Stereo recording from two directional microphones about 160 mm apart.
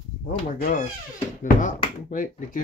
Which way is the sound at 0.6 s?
70° left (ahead or behind).